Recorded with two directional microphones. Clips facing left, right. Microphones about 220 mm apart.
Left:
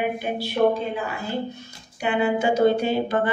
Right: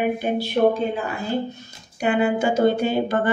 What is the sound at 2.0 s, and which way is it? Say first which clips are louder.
A woman's voice: right 2 dB; 45° right (ahead or behind).